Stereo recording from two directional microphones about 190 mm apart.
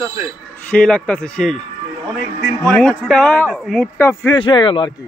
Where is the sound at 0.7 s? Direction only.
5° left (ahead or behind).